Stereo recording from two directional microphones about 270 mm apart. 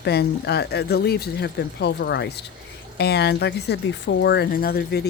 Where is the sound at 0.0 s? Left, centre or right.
Left.